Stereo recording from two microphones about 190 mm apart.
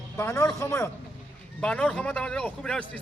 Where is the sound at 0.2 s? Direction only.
15° left (ahead or behind).